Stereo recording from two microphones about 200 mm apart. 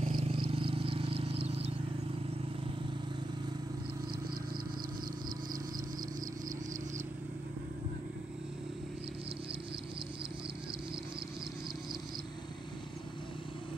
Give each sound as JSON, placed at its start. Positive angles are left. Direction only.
{"t": 0.0, "sound": "insect", "side_deg": -30}